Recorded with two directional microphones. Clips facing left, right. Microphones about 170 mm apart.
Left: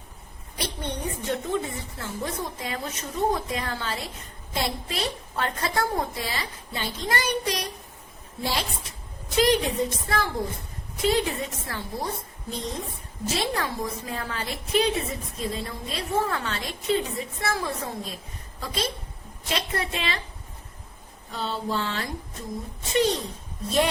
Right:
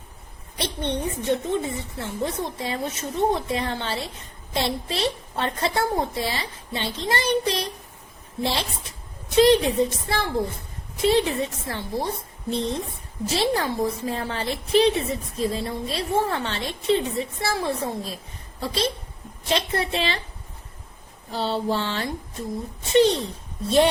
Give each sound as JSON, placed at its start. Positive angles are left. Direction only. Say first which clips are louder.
{"t": 0.5, "sound": "a woman's voice", "louder": "right 5 dB", "side_deg": -25}
{"t": 21.2, "sound": "a woman's voice", "louder": "right 5 dB", "side_deg": -30}